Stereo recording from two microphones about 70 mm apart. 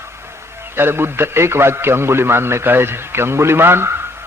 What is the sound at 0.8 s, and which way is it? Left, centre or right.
A man's voice, right.